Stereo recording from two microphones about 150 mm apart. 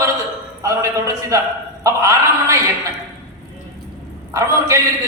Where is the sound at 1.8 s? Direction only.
20° right (ahead or behind).